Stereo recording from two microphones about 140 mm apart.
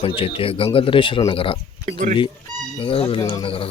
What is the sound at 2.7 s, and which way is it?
Speech, 40° left (ahead or behind).